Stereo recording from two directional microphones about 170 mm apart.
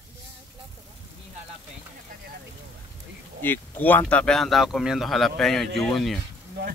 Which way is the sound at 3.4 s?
10° left (ahead or behind).